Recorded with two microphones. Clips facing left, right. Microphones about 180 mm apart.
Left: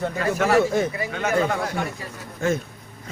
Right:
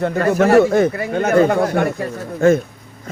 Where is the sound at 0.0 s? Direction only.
55° right (ahead or behind).